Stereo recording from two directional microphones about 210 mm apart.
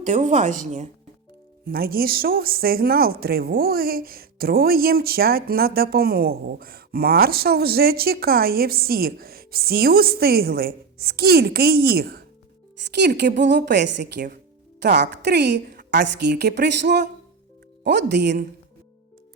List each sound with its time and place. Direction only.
0.0 s speech: 35° right (ahead or behind)
1.6 s speech: 45° right (ahead or behind)